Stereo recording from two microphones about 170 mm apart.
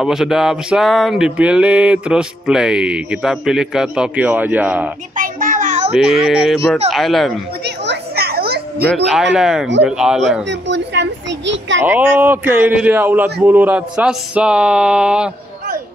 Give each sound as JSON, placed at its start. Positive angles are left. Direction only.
{"t": 0.0, "sound": "music", "side_deg": -5}
{"t": 5.1, "sound": "child singing", "side_deg": -50}
{"t": 6.2, "sound": "music", "side_deg": 0}
{"t": 7.6, "sound": "a sound", "side_deg": -80}
{"t": 8.8, "sound": "music", "side_deg": 0}
{"t": 10.4, "sound": "a child's voice", "side_deg": -90}
{"t": 11.8, "sound": "a man's voice", "side_deg": -10}